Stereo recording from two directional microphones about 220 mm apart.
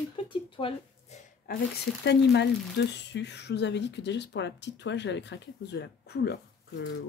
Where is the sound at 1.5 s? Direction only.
40° left (ahead or behind).